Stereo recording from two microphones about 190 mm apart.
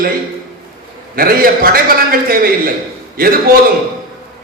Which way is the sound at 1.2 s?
50° right (ahead or behind).